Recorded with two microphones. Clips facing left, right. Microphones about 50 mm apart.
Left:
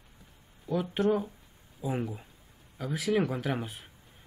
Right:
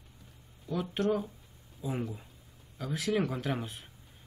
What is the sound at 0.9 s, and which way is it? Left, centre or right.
Speech, centre.